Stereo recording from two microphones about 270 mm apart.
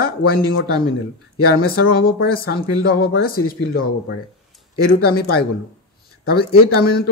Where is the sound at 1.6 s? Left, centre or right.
Left.